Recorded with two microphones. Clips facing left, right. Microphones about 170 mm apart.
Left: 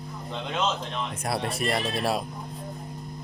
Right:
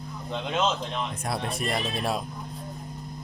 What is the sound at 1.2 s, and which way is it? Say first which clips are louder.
Speech: left 5 dB; 5° left (ahead or behind).